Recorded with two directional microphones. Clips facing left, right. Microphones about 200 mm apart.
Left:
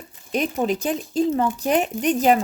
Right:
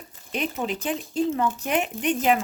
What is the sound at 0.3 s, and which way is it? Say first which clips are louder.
Speech: left 6 dB; 40° left (ahead or behind).